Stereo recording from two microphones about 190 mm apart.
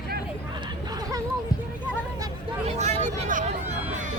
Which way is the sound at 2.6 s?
35° right (ahead or behind).